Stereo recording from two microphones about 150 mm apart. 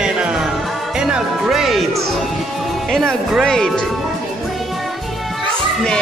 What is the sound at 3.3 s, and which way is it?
Speech, centre (ahead or behind).